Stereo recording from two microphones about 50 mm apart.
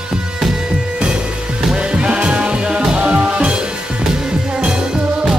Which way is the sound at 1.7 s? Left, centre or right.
Centre.